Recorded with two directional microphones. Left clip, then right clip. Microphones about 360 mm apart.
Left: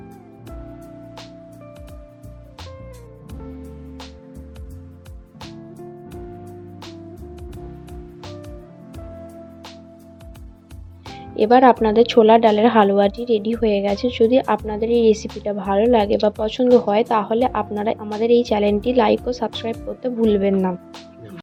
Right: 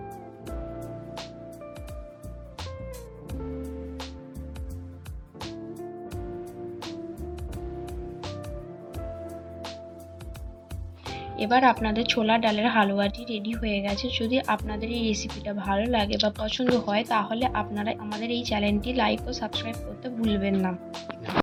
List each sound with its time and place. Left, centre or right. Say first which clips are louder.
6.7 s music: right 1 dB; centre
11.3 s speech: left 8 dB; left